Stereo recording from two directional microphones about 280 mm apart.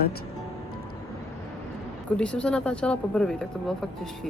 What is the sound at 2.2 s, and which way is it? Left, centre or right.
Speech, centre.